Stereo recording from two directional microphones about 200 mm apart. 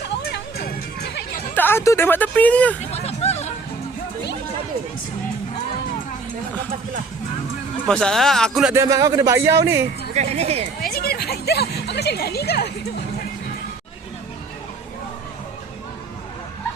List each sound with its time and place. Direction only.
0.2 s music: 55° left (ahead or behind)
1.5 s speech: 10° left (ahead or behind)
2.9 s music: 30° left (ahead or behind)
7.9 s speech: 5° left (ahead or behind)
8.7 s a man's voice: 15° right (ahead or behind)
10.2 s speech: 30° right (ahead or behind)
10.8 s music: 50° left (ahead or behind)